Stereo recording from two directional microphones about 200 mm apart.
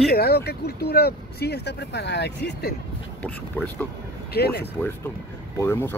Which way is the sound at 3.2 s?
10° left (ahead or behind).